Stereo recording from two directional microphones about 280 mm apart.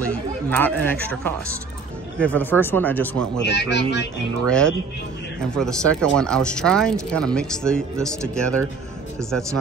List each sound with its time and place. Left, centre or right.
0.1 s speech: centre
3.4 s speech: left
4.5 s speech: centre